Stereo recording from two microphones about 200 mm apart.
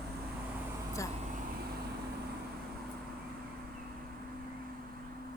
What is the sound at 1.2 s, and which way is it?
Vehicle, 40° right (ahead or behind).